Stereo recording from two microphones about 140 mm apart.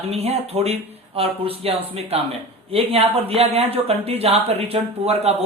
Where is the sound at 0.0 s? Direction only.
45° right (ahead or behind).